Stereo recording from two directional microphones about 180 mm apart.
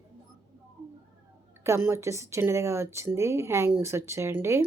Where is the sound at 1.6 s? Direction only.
15° right (ahead or behind).